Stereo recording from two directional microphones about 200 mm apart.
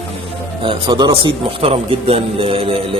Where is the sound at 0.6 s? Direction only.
20° right (ahead or behind).